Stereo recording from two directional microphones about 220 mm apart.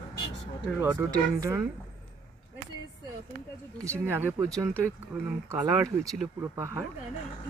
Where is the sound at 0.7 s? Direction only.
15° right (ahead or behind).